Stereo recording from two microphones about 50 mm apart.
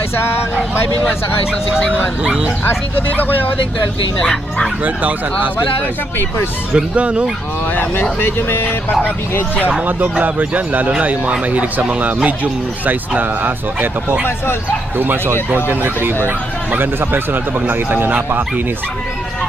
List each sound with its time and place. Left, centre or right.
0.2 s speech: left
2.2 s speech: centre
2.7 s speech: left
4.2 s speech: centre
4.8 s speech: right
6.7 s speech: right
7.7 s speech: left
9.8 s speech: right
15.0 s speech: right